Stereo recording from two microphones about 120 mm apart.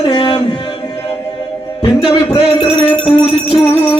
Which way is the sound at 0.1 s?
45° left (ahead or behind).